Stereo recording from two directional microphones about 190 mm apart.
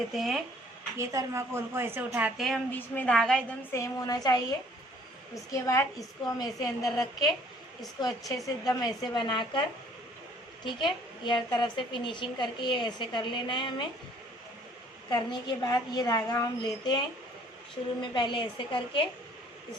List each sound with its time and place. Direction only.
0.1 s speech: centre (ahead or behind)
0.9 s speech: 15° right (ahead or behind)
2.7 s a woman's voice: 10° left (ahead or behind)
3.8 s a woman's voice: 20° left (ahead or behind)
6.9 s a woman's voice: 20° left (ahead or behind)
15.1 s a woman's voice: 20° left (ahead or behind)
18.0 s a woman's voice: 25° left (ahead or behind)